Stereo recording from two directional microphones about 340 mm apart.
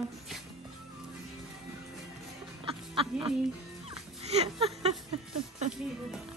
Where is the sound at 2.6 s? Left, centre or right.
Centre.